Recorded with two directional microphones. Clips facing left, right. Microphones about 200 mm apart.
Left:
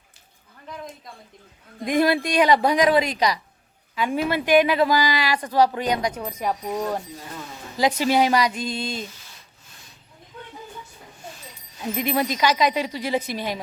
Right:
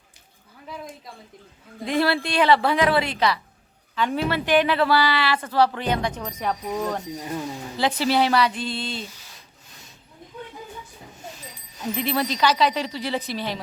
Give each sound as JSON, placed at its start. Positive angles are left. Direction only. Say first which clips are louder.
{"t": 1.8, "sound": "a woman's voice", "louder": "left 2 dB", "side_deg": 15}
{"t": 7.2, "sound": "speech", "louder": "right 7 dB", "side_deg": -15}
{"t": 7.8, "sound": "a woman's voice", "louder": "left 2 dB", "side_deg": 15}
{"t": 8.5, "sound": "a sound", "louder": "left 1 dB", "side_deg": 45}
{"t": 11.9, "sound": "a woman's voice", "louder": "left 1 dB", "side_deg": 15}